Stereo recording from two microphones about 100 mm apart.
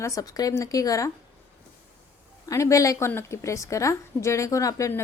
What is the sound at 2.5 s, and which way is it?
A woman's voice, 30° left (ahead or behind).